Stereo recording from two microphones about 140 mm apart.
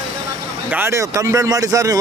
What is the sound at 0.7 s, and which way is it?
Speech, 20° right (ahead or behind).